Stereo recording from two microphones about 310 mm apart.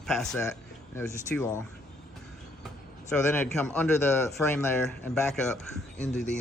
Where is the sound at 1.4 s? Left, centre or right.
Left.